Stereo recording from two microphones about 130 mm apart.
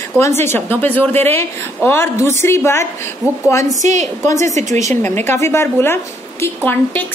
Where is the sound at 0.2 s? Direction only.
20° left (ahead or behind).